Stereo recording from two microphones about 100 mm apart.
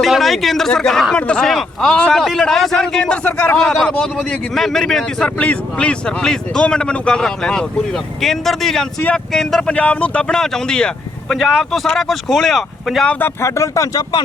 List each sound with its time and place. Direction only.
0.0 s speech: centre (ahead or behind)
13.1 s speech: 20° left (ahead or behind)